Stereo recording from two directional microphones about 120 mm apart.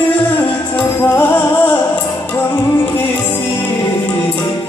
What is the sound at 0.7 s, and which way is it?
Music, 15° left (ahead or behind).